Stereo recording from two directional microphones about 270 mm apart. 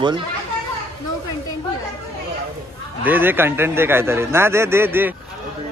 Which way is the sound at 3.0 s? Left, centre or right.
Centre.